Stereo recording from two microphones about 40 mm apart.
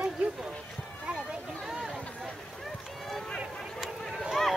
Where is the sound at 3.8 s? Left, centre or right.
Centre.